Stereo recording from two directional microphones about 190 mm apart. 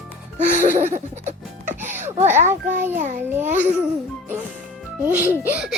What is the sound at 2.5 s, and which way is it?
Speech, 10° right (ahead or behind).